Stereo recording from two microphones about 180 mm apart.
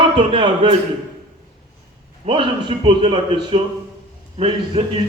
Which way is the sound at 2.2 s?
30° right (ahead or behind).